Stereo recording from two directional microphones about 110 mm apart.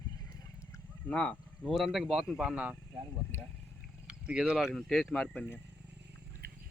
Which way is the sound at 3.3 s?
25° left (ahead or behind).